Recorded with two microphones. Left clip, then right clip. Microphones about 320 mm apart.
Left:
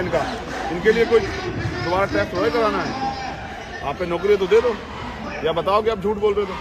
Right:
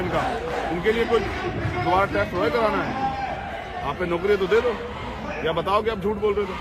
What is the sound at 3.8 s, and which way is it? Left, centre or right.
Speech, centre.